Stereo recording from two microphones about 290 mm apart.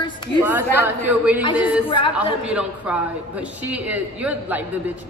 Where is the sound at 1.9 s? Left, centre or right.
Centre.